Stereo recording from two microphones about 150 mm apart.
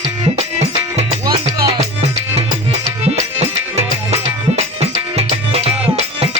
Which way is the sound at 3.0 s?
45° right (ahead or behind).